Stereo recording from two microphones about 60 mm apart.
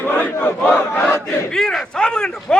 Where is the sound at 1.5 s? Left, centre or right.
Centre.